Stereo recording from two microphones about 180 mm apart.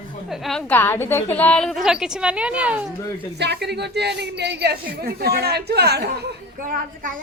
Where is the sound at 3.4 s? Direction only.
65° right (ahead or behind).